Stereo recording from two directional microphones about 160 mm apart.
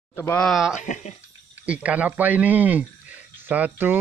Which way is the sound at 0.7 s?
50° left (ahead or behind).